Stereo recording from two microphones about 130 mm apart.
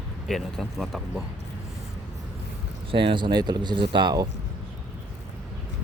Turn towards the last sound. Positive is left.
turn(degrees=-35)  # may be behind; listen again after turning